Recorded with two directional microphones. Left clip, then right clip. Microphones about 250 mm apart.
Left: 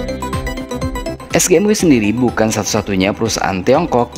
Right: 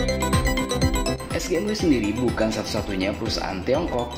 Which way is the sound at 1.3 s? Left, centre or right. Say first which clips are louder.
Left 15 dB; left.